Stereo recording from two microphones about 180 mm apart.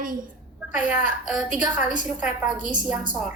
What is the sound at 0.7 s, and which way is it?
A woman's voice, 5° right (ahead or behind).